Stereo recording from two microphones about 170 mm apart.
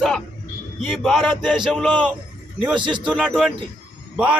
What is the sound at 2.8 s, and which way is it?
Speech, 30° right (ahead or behind).